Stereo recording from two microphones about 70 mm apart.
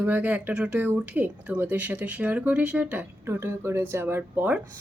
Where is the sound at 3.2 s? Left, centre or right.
Right.